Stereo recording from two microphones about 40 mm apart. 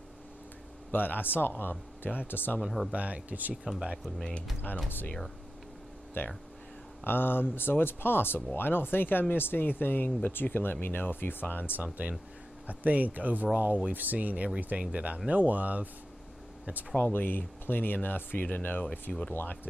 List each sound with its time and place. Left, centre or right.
0.9 s speech: left
2.6 s speech: centre
2.9 s speech: right
6.2 s speech: left
11.7 s speech: right
16.9 s speech: left
19.1 s speech: centre
19.4 s speech: left